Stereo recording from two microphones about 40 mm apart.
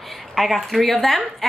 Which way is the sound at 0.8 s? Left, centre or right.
Centre.